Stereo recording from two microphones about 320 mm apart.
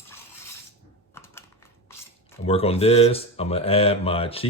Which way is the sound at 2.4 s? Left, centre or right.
Centre.